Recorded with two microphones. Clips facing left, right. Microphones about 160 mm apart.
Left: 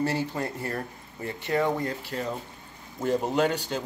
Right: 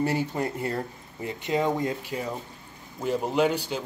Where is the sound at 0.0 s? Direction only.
15° right (ahead or behind).